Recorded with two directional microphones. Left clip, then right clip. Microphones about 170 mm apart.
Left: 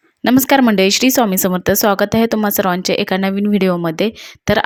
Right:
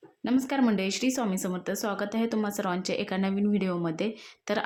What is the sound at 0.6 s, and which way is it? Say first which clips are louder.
Speech: left 15 dB; 50° left (ahead or behind).